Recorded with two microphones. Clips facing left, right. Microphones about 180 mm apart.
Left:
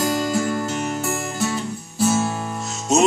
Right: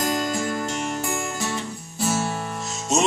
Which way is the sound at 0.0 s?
5° left (ahead or behind).